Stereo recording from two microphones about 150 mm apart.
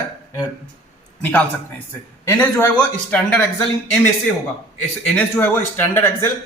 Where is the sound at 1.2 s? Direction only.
10° left (ahead or behind).